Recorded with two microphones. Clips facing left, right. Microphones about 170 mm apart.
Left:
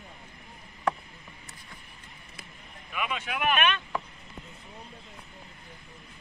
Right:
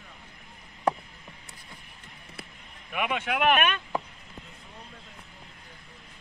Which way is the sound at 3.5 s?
45° right (ahead or behind).